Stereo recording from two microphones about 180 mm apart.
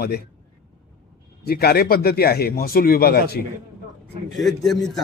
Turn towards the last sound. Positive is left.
turn(degrees=0)  # may be behind; listen again after turning